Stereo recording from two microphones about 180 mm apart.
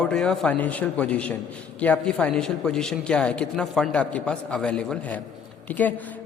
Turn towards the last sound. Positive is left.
turn(degrees=10)  # may be behind; listen again after turning